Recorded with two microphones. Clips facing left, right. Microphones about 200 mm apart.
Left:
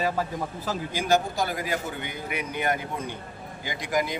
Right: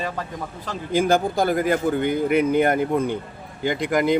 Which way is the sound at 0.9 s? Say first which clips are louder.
Right 6 dB; 55° right (ahead or behind).